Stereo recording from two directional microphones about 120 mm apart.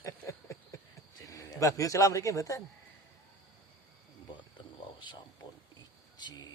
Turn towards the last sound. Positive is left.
turn(degrees=35)  # may be behind; listen again after turning